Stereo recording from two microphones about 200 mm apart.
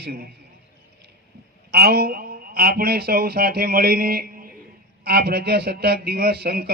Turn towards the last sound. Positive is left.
turn(degrees=-50)  # may be behind; listen again after turning